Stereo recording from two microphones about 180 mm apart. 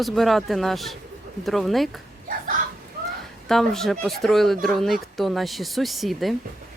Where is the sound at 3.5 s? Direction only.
Centre (ahead or behind).